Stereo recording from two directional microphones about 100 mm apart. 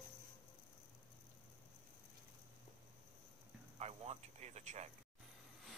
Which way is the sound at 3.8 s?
90° right.